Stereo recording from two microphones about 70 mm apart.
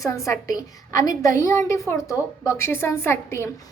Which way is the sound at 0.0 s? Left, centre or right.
Left.